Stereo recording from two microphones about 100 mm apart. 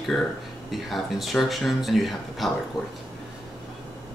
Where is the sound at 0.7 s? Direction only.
Centre (ahead or behind).